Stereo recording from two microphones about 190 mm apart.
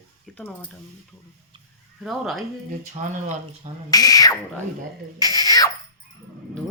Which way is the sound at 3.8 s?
20° left (ahead or behind).